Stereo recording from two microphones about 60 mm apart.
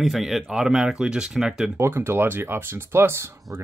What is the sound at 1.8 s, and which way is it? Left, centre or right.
Speech, right.